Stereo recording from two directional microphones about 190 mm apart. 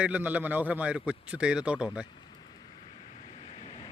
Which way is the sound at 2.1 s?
25° left (ahead or behind).